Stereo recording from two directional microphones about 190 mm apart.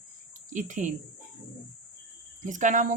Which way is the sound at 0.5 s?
40° right (ahead or behind).